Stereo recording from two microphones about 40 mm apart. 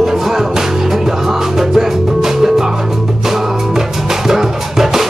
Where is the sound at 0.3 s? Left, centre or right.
Centre.